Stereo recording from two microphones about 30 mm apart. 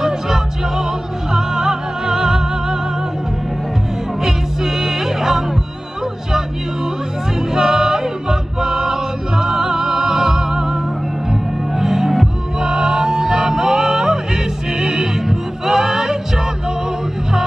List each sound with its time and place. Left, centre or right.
0.0 s music: centre
4.2 s music: centre
7.5 s music: centre